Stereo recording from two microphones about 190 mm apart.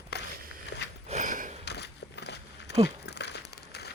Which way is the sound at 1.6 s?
65° left (ahead or behind).